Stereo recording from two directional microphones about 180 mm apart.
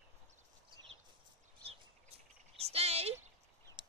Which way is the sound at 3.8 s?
25° right (ahead or behind).